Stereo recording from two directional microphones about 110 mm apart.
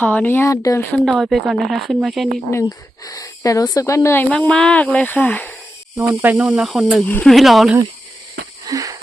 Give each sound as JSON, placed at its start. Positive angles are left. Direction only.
{"t": 0.0, "sound": "speech", "side_deg": 15}
{"t": 0.9, "sound": "speech", "side_deg": 5}
{"t": 2.6, "sound": "speech", "side_deg": 35}
{"t": 4.3, "sound": "speech", "side_deg": 5}
{"t": 6.0, "sound": "speech", "side_deg": -15}
{"t": 8.6, "sound": "wheeze", "side_deg": -30}